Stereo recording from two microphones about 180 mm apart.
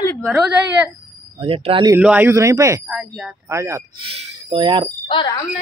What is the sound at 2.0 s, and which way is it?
Speech, 10° right (ahead or behind).